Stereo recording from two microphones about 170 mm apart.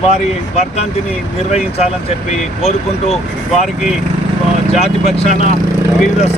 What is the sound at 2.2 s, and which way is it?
Speech, 40° left (ahead or behind).